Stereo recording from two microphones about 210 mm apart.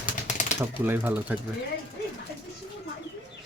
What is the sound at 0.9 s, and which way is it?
Speech, 10° right (ahead or behind).